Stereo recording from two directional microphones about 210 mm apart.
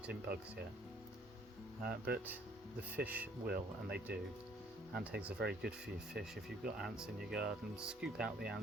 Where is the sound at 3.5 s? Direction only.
50° right (ahead or behind).